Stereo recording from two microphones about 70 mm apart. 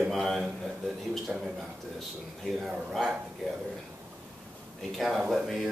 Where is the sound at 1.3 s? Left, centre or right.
Centre.